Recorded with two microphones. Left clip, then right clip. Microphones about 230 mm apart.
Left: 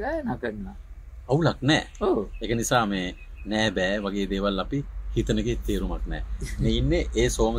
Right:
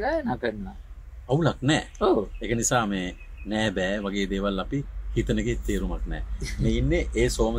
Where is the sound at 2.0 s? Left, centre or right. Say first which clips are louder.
Right 2 dB; centre.